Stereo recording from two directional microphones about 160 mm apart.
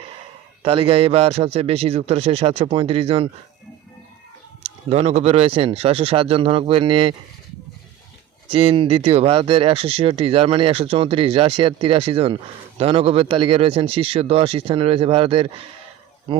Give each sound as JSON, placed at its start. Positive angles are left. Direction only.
{"t": 0.6, "sound": "speech", "side_deg": -35}
{"t": 4.9, "sound": "speech", "side_deg": -40}
{"t": 8.4, "sound": "speech", "side_deg": -35}